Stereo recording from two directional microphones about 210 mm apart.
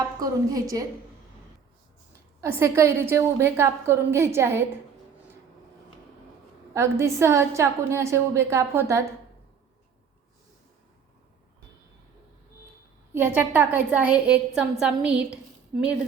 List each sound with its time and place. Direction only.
0.2 s a woman's voice: 15° right (ahead or behind)
2.4 s a woman's voice: 15° right (ahead or behind)
6.7 s a woman's voice: 15° right (ahead or behind)
13.1 s a woman's voice: 10° right (ahead or behind)